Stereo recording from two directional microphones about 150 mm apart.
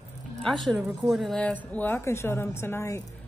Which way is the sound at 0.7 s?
5° right (ahead or behind).